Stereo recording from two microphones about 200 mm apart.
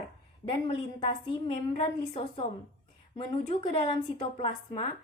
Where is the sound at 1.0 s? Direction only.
25° left (ahead or behind).